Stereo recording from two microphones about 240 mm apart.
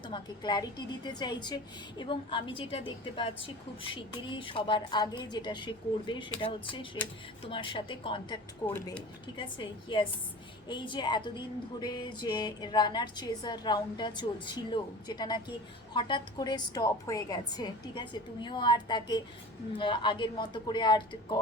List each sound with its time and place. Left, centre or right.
0.1 s a woman's voice: centre
8.6 s speech: centre
9.4 s a woman's voice: centre